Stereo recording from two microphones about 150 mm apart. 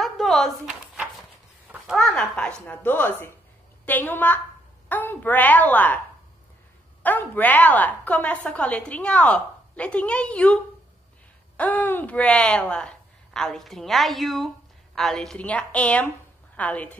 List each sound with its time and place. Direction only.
0.0 s a sound: centre (ahead or behind)
2.0 s a woman's voice: 5° left (ahead or behind)
7.0 s a woman's voice: 10° left (ahead or behind)